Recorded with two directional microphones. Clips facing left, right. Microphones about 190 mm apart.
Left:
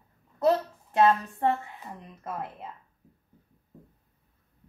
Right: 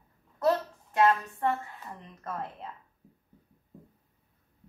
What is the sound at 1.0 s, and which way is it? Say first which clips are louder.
Speech: left 2 dB; 30° left (ahead or behind).